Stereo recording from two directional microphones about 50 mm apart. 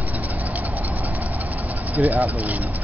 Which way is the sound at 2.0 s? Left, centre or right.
Right.